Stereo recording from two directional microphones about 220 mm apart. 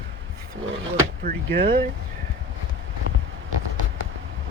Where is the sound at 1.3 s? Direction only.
45° right (ahead or behind).